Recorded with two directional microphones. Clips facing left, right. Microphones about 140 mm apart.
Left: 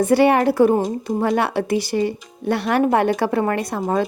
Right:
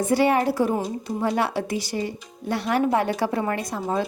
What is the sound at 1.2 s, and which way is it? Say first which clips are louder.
Speech: left 3 dB; 65° left (ahead or behind).